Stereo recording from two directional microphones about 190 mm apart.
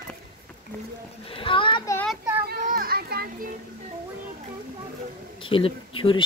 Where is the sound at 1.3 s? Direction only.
30° left (ahead or behind).